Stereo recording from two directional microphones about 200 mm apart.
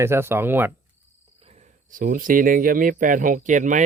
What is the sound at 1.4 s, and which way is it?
Speech, 35° right (ahead or behind).